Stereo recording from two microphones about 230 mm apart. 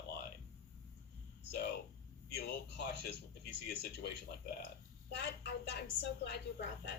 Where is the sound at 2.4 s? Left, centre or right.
Left.